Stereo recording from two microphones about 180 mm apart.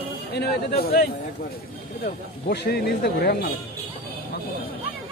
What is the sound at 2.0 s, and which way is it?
Speech, 65° left (ahead or behind).